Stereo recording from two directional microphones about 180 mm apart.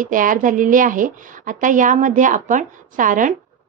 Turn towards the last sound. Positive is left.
turn(degrees=-45)  # may be behind; listen again after turning